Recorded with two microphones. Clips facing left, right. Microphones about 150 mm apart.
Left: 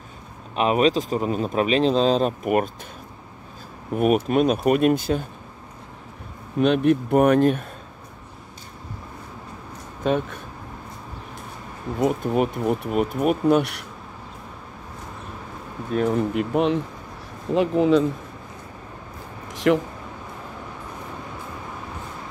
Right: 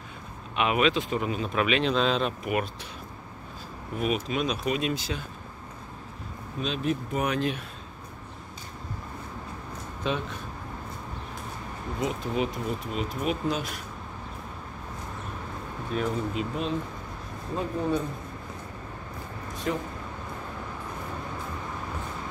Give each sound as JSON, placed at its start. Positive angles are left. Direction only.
{"t": 0.6, "sound": "speech", "side_deg": 35}
{"t": 3.9, "sound": "speech", "side_deg": 50}
{"t": 6.6, "sound": "speech", "side_deg": 60}
{"t": 10.0, "sound": "speech", "side_deg": 50}
{"t": 12.0, "sound": "speech", "side_deg": 50}
{"t": 15.9, "sound": "speech", "side_deg": 60}
{"t": 17.6, "sound": "speech", "side_deg": 90}
{"t": 19.4, "sound": "a sound", "side_deg": 90}